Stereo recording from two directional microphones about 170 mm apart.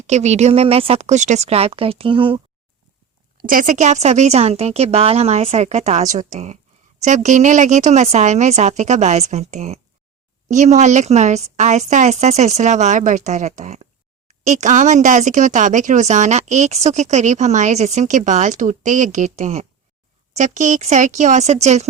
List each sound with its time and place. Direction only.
0.1 s speech: 40° right (ahead or behind)
3.3 s speech: 55° right (ahead or behind)